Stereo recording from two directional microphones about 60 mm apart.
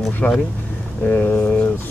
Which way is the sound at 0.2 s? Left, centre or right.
Left.